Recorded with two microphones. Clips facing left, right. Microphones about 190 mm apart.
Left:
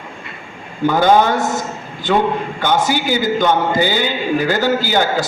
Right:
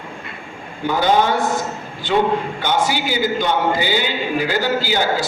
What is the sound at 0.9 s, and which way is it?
A man's voice, 50° left (ahead or behind).